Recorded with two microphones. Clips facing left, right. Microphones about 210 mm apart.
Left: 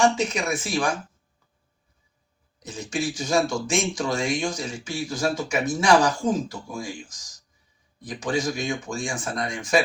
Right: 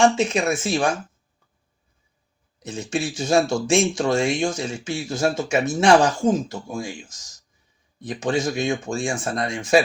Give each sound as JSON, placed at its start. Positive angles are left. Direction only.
{"t": 0.0, "sound": "speech", "side_deg": -25}
{"t": 2.6, "sound": "speech", "side_deg": -25}